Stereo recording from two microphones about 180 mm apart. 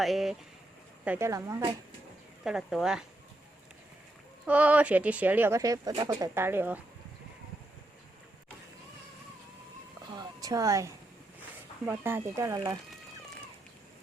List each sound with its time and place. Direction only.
0.0 s speech: centre (ahead or behind)
1.0 s speech: 10° right (ahead or behind)
2.4 s speech: 5° right (ahead or behind)
4.4 s speech: 10° right (ahead or behind)
10.2 s a sound: 20° right (ahead or behind)
11.9 s speech: 10° right (ahead or behind)